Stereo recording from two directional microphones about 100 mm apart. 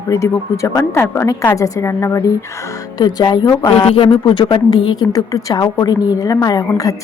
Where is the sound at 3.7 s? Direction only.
65° left (ahead or behind).